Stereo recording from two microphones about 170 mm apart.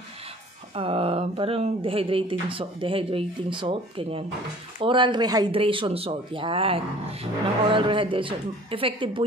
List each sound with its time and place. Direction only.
0.7 s speech: 35° right (ahead or behind)